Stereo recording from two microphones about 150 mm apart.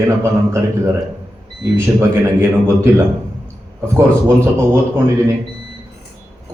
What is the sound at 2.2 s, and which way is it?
Speech, 15° right (ahead or behind).